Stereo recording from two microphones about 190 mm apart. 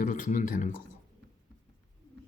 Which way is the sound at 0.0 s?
40° left (ahead or behind).